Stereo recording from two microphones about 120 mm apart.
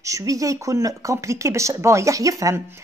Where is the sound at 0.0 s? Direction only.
25° right (ahead or behind).